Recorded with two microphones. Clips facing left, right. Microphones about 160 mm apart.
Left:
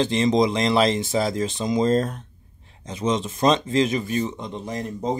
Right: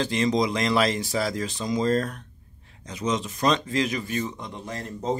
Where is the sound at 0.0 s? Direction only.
25° left (ahead or behind).